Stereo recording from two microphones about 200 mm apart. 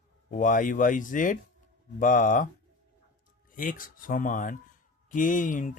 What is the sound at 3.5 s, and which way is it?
Speech, 40° left (ahead or behind).